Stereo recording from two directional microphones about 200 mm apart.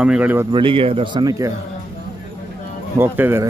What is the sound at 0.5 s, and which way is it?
Speech, 25° right (ahead or behind).